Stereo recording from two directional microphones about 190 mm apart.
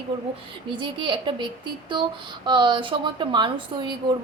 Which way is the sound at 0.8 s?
25° right (ahead or behind).